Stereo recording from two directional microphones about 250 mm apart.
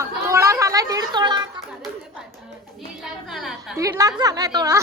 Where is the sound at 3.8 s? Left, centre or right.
Centre.